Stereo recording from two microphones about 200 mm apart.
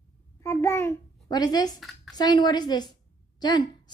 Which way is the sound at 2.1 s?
20° left (ahead or behind).